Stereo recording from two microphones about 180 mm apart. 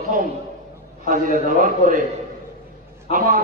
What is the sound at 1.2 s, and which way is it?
Speech, 50° right (ahead or behind).